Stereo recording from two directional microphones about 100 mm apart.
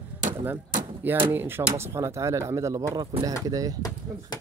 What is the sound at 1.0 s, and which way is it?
Speech, 20° right (ahead or behind).